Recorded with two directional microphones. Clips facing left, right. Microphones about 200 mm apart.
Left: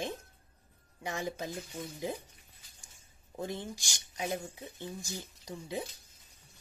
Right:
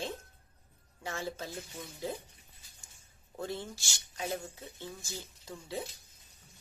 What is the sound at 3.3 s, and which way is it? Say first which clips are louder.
A woman's voice: left 1 dB; 15° left (ahead or behind).